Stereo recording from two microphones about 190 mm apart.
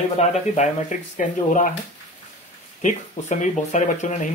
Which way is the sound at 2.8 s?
40° left (ahead or behind).